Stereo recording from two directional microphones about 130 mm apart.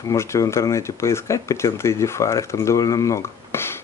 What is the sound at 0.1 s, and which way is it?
Speech, 20° left (ahead or behind).